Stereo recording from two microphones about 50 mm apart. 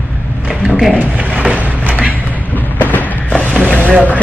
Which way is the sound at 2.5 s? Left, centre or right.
Left.